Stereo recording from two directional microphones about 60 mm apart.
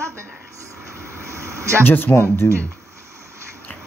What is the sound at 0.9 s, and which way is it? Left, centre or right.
Vehicle, right.